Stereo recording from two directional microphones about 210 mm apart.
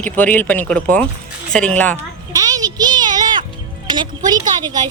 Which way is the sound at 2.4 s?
15° right (ahead or behind).